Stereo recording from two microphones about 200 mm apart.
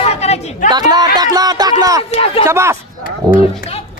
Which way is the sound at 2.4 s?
15° right (ahead or behind).